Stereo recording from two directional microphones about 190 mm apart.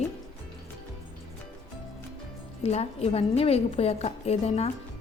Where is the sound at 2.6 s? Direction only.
35° left (ahead or behind).